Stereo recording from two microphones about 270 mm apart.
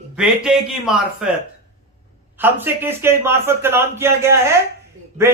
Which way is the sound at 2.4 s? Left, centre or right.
Centre.